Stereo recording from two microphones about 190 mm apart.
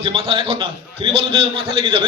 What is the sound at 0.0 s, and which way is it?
A man's voice, 30° right (ahead or behind).